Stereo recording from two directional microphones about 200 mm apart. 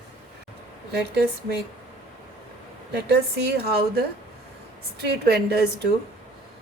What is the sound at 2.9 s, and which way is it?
A woman's voice, 55° right (ahead or behind).